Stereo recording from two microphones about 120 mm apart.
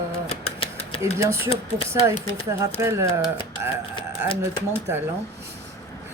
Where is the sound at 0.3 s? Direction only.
55° left (ahead or behind).